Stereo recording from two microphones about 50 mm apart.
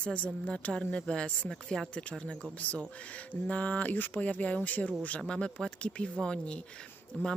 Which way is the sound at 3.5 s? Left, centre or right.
Left.